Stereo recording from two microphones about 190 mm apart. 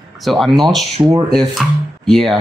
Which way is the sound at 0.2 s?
Centre (ahead or behind).